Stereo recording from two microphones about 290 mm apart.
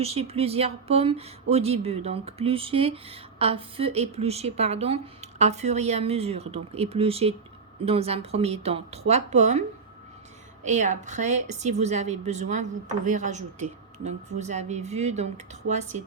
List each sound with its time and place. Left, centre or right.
0.0 s speech: right